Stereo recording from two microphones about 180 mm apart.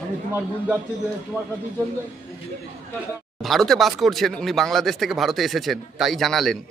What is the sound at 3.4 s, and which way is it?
Speech, centre (ahead or behind).